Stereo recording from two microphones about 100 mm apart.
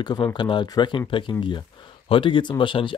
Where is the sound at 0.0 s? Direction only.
45° left (ahead or behind).